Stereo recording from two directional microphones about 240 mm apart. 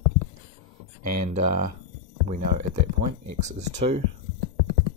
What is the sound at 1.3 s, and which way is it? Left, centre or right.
Speech, right.